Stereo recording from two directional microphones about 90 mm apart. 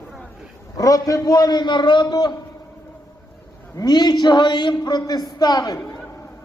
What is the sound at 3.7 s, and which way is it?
A man's voice, 50° left (ahead or behind).